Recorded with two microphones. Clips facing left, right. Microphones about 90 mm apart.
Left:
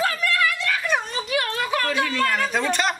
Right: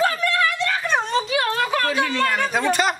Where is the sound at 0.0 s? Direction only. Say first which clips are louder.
Right 2 dB; 30° right (ahead or behind).